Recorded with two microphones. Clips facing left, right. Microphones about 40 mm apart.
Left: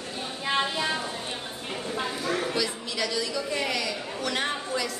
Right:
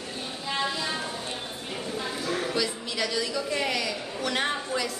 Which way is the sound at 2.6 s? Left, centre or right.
Centre.